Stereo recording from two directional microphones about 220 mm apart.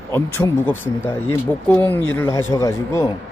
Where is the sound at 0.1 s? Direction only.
10° left (ahead or behind).